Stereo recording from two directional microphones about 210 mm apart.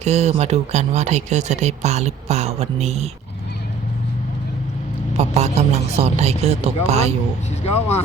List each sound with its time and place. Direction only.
0.0 s speech: 30° right (ahead or behind)
5.1 s speech: 30° right (ahead or behind)